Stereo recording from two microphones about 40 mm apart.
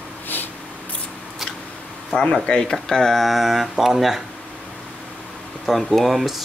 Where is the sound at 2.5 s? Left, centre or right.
Centre.